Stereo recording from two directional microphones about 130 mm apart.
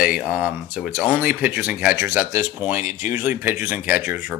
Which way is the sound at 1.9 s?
20° right (ahead or behind).